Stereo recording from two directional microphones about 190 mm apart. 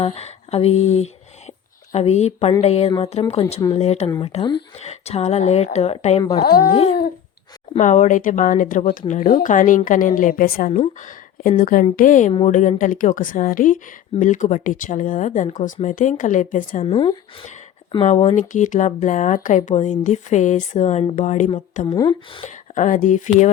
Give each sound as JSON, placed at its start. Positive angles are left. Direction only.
{"t": 0.0, "sound": "speech", "side_deg": 35}
{"t": 6.4, "sound": "speech", "side_deg": 50}
{"t": 7.7, "sound": "speech", "side_deg": 40}
{"t": 16.8, "sound": "speech", "side_deg": 25}
{"t": 21.9, "sound": "speech", "side_deg": 25}
{"t": 22.7, "sound": "speech", "side_deg": 40}